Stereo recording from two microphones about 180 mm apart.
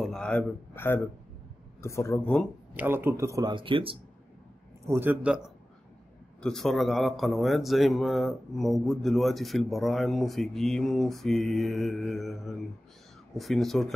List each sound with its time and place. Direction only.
0.0 s a sound: 5° left (ahead or behind)
1.8 s speech: 15° left (ahead or behind)
2.7 s speech: 10° right (ahead or behind); by 4.0 s 30° right (ahead or behind)
4.8 s a man's voice: 10° right (ahead or behind)